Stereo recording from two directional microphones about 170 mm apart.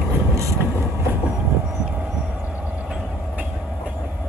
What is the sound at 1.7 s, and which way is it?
Train, 10° right (ahead or behind).